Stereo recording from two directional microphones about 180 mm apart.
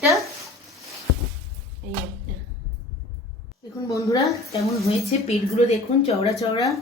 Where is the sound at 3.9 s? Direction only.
20° left (ahead or behind).